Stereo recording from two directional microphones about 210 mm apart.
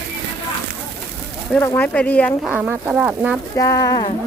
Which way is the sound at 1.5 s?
10° left (ahead or behind).